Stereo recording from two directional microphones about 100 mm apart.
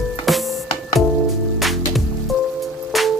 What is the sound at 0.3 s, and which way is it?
Music, centre (ahead or behind).